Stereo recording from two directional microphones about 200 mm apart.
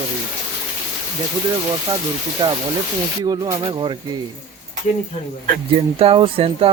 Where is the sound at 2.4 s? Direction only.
20° right (ahead or behind).